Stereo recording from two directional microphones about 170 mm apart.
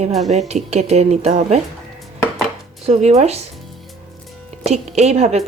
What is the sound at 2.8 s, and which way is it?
Speech, 40° right (ahead or behind).